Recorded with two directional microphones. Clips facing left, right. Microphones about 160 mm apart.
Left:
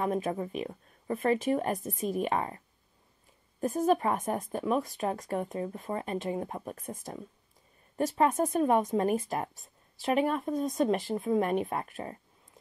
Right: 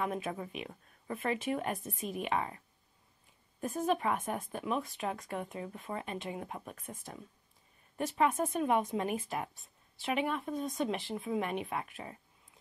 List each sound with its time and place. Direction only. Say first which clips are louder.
0.0 s speech: left 6 dB; 40° left (ahead or behind)
3.6 s speech: left 5 dB; 40° left (ahead or behind)